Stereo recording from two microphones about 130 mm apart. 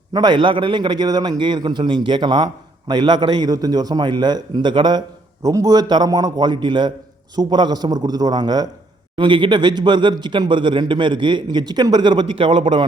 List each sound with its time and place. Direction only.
0.1 s a man's voice: 35° right (ahead or behind)